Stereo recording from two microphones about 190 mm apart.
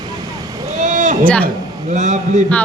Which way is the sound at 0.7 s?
40° right (ahead or behind).